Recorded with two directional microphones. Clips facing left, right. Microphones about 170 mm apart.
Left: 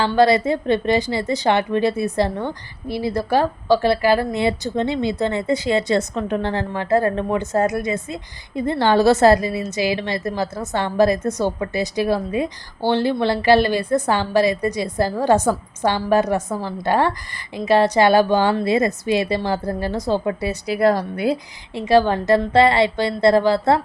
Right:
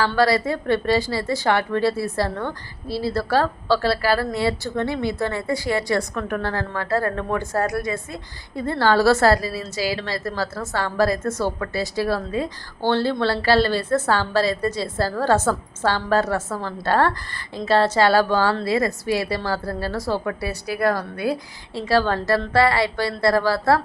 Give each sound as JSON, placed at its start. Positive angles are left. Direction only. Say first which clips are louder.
{"t": 0.0, "sound": "a woman's voice", "louder": "left 3 dB", "side_deg": 20}